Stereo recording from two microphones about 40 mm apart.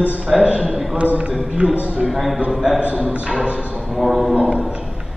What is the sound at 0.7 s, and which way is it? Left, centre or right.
Music, centre.